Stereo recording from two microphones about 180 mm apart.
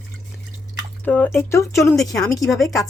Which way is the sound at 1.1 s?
10° left (ahead or behind).